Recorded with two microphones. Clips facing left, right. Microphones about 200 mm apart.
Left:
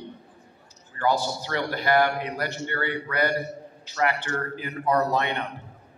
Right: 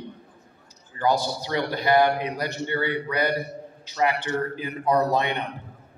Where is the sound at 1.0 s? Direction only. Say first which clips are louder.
Right 1 dB; 15° right (ahead or behind).